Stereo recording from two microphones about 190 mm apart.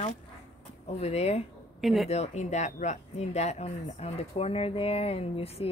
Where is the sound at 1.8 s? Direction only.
Centre (ahead or behind).